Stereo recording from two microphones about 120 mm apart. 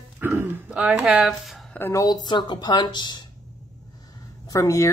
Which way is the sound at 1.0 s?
5° right (ahead or behind).